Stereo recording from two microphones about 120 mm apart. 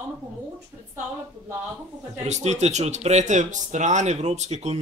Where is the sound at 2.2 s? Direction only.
70° right (ahead or behind).